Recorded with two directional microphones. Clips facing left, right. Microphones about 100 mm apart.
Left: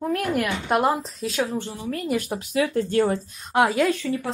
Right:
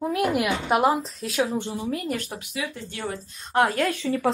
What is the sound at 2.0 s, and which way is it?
Speech, 10° left (ahead or behind).